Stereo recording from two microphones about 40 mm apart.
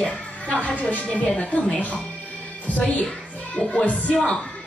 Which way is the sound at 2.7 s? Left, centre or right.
Left.